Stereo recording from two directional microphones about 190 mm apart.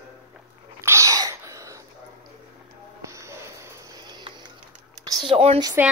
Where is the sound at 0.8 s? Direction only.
15° right (ahead or behind).